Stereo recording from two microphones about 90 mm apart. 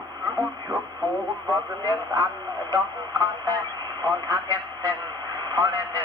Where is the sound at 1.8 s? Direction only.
40° right (ahead or behind).